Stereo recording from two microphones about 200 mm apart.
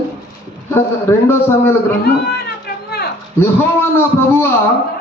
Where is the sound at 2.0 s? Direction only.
50° left (ahead or behind).